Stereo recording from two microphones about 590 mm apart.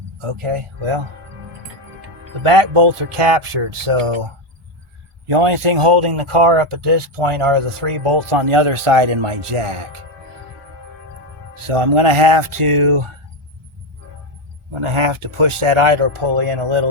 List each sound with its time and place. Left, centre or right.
0.3 s speech: right
2.4 s speech: right
5.3 s speech: right
11.6 s speech: right
14.7 s speech: right